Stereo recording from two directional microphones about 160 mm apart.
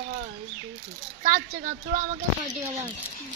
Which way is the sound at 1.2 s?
50° right (ahead or behind).